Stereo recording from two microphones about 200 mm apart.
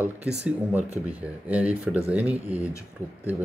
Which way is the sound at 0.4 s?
5° right (ahead or behind).